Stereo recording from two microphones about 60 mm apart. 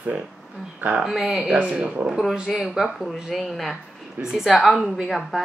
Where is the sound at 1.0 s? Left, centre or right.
Centre.